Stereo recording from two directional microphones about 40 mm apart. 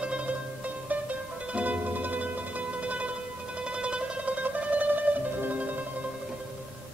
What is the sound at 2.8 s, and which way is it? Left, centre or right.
Music, right.